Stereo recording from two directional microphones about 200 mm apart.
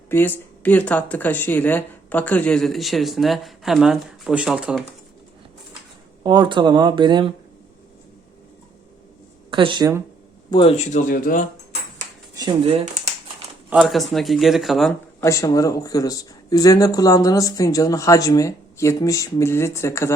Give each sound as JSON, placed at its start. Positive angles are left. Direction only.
{"t": 0.1, "sound": "speech", "side_deg": 10}
{"t": 6.2, "sound": "speech", "side_deg": -20}
{"t": 9.5, "sound": "speech", "side_deg": -25}
{"t": 10.5, "sound": "speech", "side_deg": 25}
{"t": 12.3, "sound": "shuffling cards", "side_deg": -20}
{"t": 13.7, "sound": "speech", "side_deg": -5}
{"t": 15.2, "sound": "speech", "side_deg": 15}